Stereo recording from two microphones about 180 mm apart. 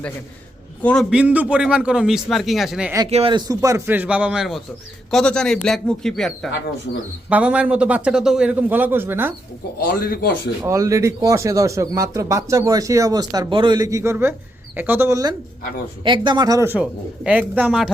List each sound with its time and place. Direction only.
0.8 s a man's voice: 10° left (ahead or behind)
1.1 s a man's voice: 5° right (ahead or behind)
3.1 s a man's voice: 30° right (ahead or behind); by 9.3 s 10° right (ahead or behind)
9.9 s a man's voice: 55° left (ahead or behind)
10.6 s speech: 20° right (ahead or behind)